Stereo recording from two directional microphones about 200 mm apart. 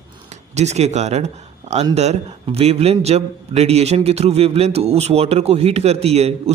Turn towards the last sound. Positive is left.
turn(degrees=-30)  # may be behind; listen again after turning